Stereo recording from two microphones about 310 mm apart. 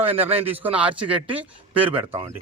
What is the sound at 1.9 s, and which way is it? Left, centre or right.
Speech, centre.